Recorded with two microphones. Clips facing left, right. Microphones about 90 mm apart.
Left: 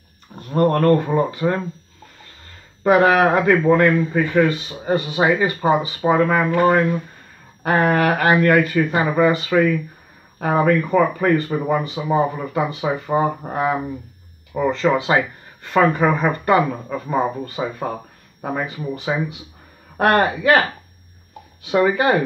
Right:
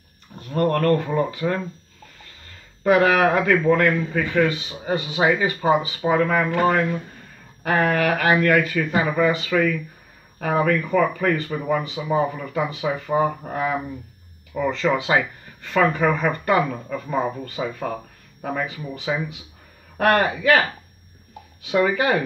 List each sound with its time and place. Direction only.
0.4 s a man's voice: 25° left (ahead or behind)
2.8 s a man's voice: 25° left (ahead or behind)
4.5 s speech: 40° left (ahead or behind)
6.0 s a man's voice: 15° left (ahead or behind)
14.5 s a man's voice: 25° left (ahead or behind)
16.6 s a man's voice: 15° left (ahead or behind)
21.6 s a man's voice: 25° left (ahead or behind)